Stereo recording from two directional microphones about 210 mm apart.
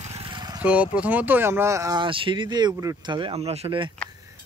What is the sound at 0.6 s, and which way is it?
Speech, 5° right (ahead or behind).